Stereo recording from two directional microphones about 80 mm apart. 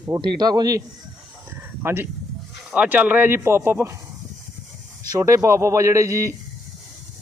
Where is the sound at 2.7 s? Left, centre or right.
Centre.